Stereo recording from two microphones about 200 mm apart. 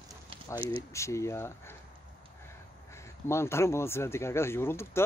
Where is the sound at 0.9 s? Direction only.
15° left (ahead or behind).